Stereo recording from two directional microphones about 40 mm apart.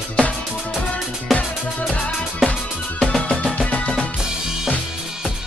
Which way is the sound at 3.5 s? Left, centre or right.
Left.